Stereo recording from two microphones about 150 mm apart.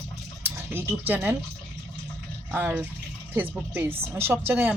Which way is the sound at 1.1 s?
10° right (ahead or behind).